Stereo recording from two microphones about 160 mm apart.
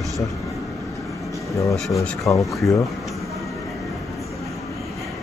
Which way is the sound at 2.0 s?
20° left (ahead or behind).